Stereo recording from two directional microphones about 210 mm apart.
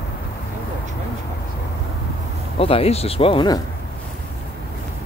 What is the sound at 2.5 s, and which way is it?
Speech, 25° left (ahead or behind).